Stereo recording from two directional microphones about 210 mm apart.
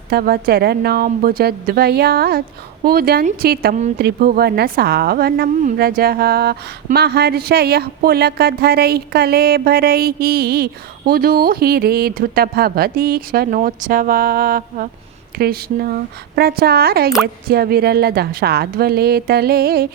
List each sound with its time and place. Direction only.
0.1 s a woman's voice: 45° right (ahead or behind)